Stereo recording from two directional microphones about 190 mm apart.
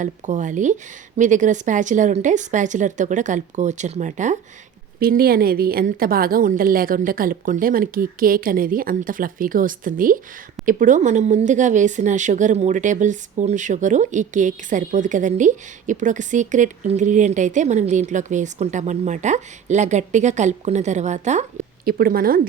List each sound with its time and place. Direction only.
0.0 s a woman's voice: 40° right (ahead or behind)
4.9 s a woman's voice: 50° right (ahead or behind)
21.8 s a woman's voice: 50° right (ahead or behind)